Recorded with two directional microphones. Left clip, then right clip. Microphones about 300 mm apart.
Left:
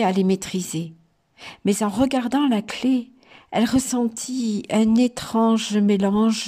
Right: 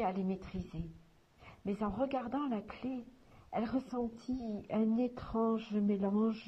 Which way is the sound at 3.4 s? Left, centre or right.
Centre.